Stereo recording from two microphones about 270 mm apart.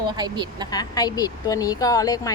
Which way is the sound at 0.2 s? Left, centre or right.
Centre.